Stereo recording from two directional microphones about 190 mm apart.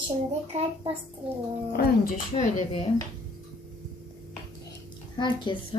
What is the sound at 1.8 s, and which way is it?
Speech, 50° left (ahead or behind).